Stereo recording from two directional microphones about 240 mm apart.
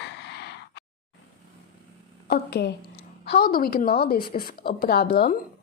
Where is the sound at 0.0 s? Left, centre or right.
Left.